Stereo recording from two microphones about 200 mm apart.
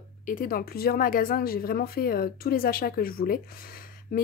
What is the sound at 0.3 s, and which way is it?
Speech, 45° left (ahead or behind).